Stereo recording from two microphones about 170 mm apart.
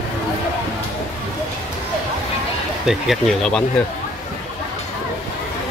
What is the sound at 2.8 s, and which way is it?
Speech, centre (ahead or behind).